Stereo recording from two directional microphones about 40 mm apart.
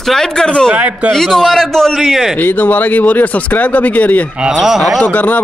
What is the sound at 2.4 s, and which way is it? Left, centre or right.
Speech, left.